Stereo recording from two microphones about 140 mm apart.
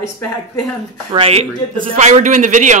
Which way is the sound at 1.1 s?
40° right (ahead or behind).